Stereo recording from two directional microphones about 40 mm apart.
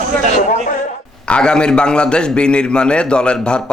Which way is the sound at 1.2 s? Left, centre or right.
Left.